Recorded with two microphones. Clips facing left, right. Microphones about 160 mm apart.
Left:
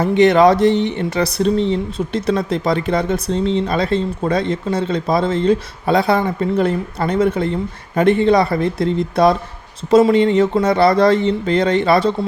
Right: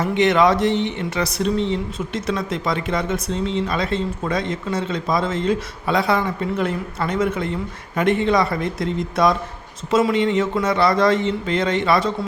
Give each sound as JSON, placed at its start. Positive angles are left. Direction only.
{"t": 0.0, "sound": "speech", "side_deg": 35}